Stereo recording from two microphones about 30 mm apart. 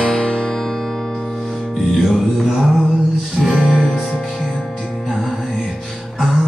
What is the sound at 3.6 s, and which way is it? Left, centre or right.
Music, centre.